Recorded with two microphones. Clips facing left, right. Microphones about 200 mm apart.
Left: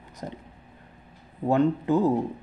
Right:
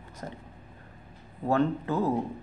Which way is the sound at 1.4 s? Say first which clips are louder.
Left 4 dB; 15° left (ahead or behind).